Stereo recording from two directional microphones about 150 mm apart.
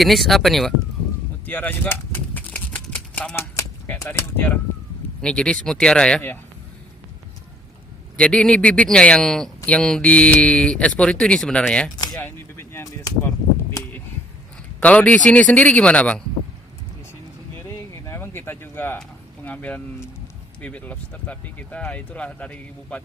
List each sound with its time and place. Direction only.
0.0 s speech: centre (ahead or behind)
1.5 s a sound: 10° left (ahead or behind)
3.5 s speech: 20° left (ahead or behind)
8.1 s speech: 5° left (ahead or behind)
11.9 s speech: 25° left (ahead or behind)
14.8 s speech: 10° left (ahead or behind)
18.0 s a sound: 15° left (ahead or behind)
19.5 s speech: 10° left (ahead or behind)